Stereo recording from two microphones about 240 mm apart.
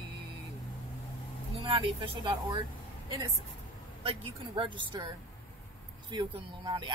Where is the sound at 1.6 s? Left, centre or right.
Right.